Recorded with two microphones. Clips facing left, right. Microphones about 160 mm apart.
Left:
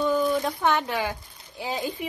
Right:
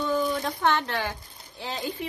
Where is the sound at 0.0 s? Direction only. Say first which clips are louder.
Left 3 dB; 5° left (ahead or behind).